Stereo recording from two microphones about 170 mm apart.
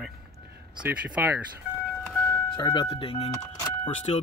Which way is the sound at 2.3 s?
20° left (ahead or behind).